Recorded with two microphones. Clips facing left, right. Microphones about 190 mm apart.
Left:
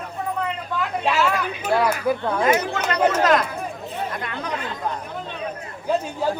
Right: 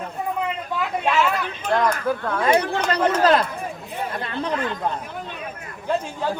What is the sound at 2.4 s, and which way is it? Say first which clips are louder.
Speech: right 3 dB; 30° right (ahead or behind).